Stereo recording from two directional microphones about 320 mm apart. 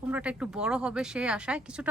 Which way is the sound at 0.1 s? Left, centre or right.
Centre.